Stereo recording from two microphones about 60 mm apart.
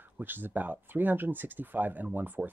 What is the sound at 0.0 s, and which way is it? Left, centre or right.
Speech, right.